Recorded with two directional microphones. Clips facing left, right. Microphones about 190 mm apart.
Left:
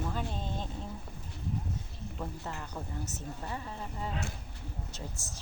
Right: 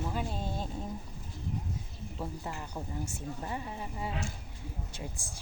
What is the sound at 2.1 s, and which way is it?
A woman's voice, 15° right (ahead or behind).